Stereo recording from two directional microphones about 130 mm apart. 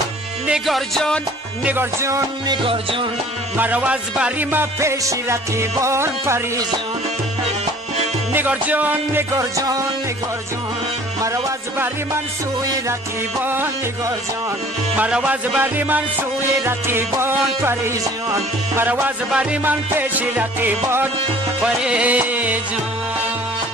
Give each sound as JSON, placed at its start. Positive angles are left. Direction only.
{"t": 0.5, "sound": "music", "side_deg": 0}
{"t": 1.6, "sound": "music", "side_deg": -15}
{"t": 2.5, "sound": "music", "side_deg": -45}
{"t": 3.5, "sound": "music", "side_deg": -10}
{"t": 8.3, "sound": "music", "side_deg": -15}
{"t": 11.2, "sound": "music", "side_deg": -25}
{"t": 13.4, "sound": "music", "side_deg": -15}